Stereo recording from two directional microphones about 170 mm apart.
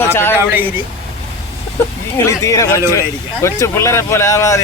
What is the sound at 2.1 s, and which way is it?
Speech, 20° left (ahead or behind).